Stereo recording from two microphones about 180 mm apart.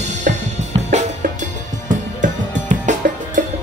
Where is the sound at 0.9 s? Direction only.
45° right (ahead or behind).